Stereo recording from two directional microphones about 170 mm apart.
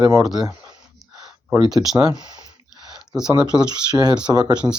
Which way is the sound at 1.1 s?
20° right (ahead or behind).